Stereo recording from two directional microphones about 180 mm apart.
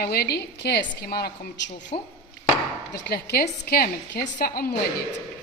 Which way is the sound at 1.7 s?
35° left (ahead or behind).